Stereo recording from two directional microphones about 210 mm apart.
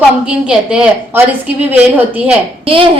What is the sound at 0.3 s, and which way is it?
A woman's voice, 5° right (ahead or behind).